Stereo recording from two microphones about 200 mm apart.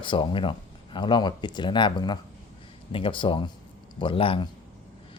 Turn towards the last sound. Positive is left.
turn(degrees=25)  # may be behind; listen again after turning